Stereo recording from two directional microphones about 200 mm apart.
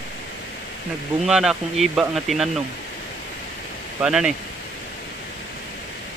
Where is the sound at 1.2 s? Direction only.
Centre (ahead or behind).